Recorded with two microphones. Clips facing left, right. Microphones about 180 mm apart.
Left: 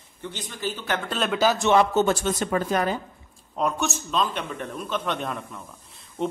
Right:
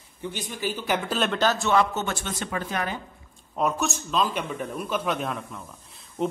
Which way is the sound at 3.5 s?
Centre (ahead or behind).